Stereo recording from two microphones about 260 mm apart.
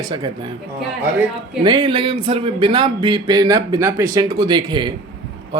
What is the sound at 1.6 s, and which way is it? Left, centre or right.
Speech, centre.